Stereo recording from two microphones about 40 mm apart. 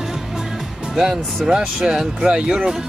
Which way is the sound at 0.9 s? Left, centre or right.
Centre.